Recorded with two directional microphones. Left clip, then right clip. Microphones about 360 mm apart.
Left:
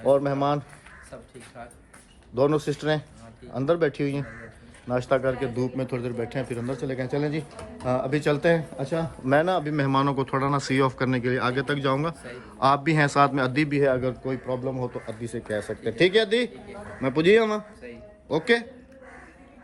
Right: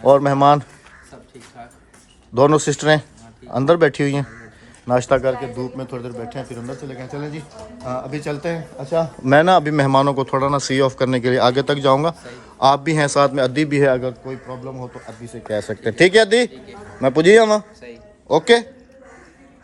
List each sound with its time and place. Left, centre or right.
0.0 s speech: right
2.3 s speech: right
5.4 s speech: centre
9.2 s speech: right; by 13.7 s centre
13.7 s speech: right
14.0 s speech: centre
15.4 s a man's voice: right